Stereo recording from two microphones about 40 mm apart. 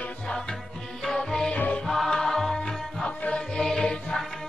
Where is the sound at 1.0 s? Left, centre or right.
Centre.